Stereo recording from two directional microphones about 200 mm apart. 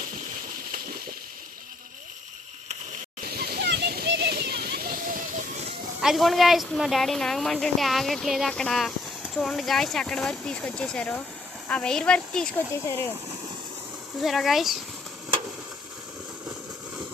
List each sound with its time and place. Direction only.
3.2 s splash: 50° right (ahead or behind)
6.0 s speech: centre (ahead or behind)
14.2 s speech: centre (ahead or behind)